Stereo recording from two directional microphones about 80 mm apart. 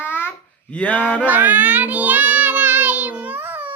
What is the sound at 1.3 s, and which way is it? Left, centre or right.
Child singing, right.